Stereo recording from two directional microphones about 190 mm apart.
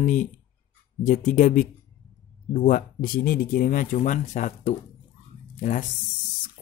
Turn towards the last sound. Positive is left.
turn(degrees=40)  # may be behind; listen again after turning